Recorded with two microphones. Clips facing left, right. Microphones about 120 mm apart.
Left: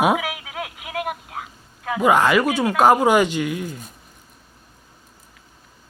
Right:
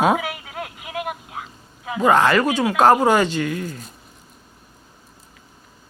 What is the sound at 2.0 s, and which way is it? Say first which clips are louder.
Speech: right 1 dB; 10° left (ahead or behind).